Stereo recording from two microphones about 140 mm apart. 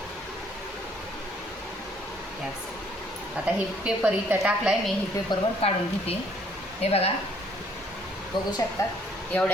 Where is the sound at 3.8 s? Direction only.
10° right (ahead or behind).